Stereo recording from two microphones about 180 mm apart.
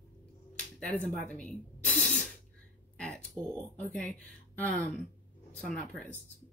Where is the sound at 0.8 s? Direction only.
10° left (ahead or behind).